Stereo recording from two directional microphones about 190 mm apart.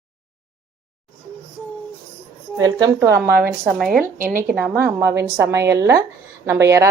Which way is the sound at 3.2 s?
55° right (ahead or behind).